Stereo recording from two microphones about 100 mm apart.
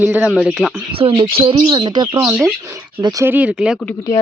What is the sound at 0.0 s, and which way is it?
Speech, 15° right (ahead or behind).